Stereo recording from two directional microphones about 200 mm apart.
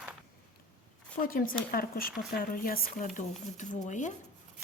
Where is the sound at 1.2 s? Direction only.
45° left (ahead or behind).